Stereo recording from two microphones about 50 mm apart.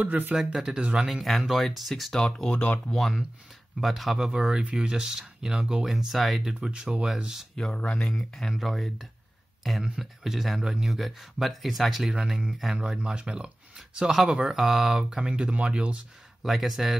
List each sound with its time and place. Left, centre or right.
0.0 s speech: right
0.4 s speech: centre
5.9 s speech: centre
6.7 s speech: centre
7.7 s speech: left
8.2 s speech: centre
9.6 s a sound: centre
9.8 s speech: centre; by 16.0 s right
16.4 s speech: centre